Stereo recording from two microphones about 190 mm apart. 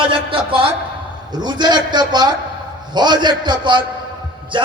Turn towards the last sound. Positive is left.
turn(degrees=-25)  # may be behind; listen again after turning